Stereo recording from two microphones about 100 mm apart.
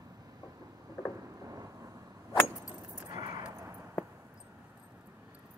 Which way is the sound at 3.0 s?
40° right (ahead or behind).